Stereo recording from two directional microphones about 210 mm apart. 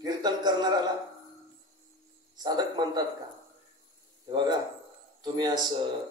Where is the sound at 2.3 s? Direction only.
20° right (ahead or behind).